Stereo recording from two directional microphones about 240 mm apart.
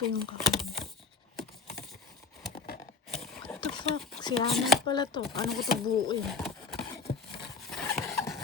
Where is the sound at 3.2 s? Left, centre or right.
Centre.